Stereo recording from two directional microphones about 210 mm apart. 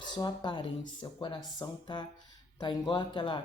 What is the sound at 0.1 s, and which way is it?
Speech, 20° left (ahead or behind).